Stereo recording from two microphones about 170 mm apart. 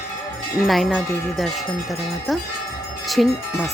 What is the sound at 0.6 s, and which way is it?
Wind chime, centre (ahead or behind).